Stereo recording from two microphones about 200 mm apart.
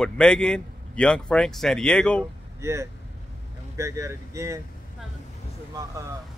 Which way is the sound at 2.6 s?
15° right (ahead or behind).